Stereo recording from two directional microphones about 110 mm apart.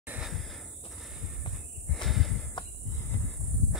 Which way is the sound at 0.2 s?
Centre (ahead or behind).